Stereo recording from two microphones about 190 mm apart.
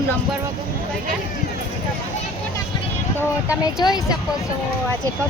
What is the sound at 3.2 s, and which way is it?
Speech, 15° left (ahead or behind).